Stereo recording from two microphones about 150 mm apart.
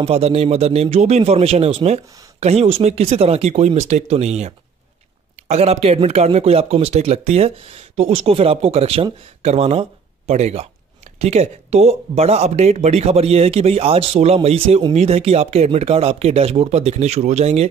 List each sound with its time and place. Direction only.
0.0 s speech: 40° right (ahead or behind)